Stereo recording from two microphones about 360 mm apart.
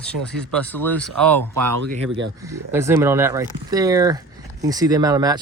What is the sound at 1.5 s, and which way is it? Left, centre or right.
Speech, right.